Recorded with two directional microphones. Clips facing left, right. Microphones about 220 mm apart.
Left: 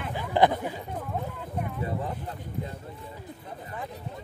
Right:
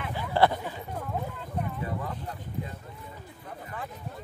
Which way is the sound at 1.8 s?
30° left (ahead or behind).